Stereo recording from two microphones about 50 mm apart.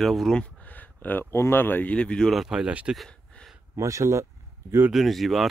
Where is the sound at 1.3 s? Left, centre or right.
Left.